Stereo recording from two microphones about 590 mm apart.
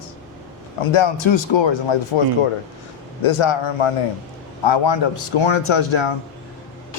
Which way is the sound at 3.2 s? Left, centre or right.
Left.